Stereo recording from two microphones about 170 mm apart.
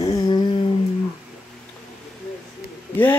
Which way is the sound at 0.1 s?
25° left (ahead or behind).